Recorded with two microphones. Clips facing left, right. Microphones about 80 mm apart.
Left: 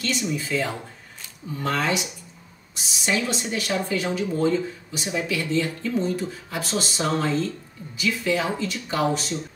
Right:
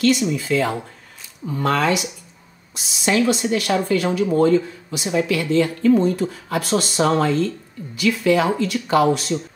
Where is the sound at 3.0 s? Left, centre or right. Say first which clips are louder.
Right 7 dB; right.